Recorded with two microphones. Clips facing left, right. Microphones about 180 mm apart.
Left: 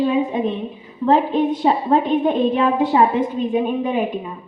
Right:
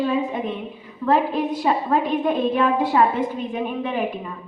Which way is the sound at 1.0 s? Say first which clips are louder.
Left 4 dB; 25° left (ahead or behind).